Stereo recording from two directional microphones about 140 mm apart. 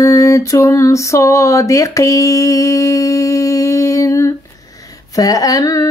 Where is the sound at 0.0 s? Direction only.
20° left (ahead or behind).